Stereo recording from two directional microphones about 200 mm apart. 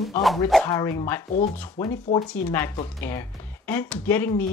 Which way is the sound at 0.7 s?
15° left (ahead or behind).